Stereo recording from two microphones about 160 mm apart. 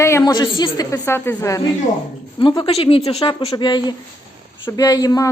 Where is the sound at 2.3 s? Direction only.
30° left (ahead or behind).